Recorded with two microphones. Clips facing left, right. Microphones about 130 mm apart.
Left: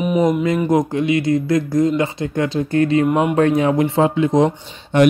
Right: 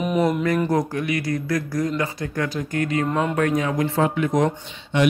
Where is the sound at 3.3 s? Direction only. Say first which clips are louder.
Left 6 dB; 30° left (ahead or behind).